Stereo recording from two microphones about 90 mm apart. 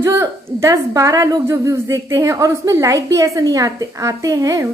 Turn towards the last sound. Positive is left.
turn(degrees=-40)  # may be behind; listen again after turning